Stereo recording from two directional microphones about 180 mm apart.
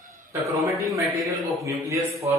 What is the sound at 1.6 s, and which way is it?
Speech, 15° right (ahead or behind).